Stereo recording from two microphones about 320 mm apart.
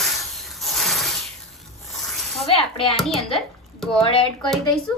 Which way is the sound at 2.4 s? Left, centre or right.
Centre.